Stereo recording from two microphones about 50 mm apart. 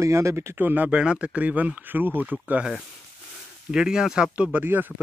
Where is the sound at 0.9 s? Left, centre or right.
Right.